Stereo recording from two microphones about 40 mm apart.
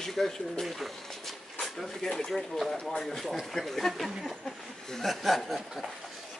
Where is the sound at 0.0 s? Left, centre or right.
Centre.